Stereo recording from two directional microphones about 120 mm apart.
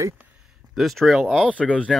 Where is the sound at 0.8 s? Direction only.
Centre (ahead or behind).